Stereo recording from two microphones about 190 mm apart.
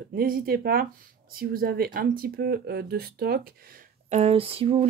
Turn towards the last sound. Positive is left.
turn(degrees=-30)  # may be behind; listen again after turning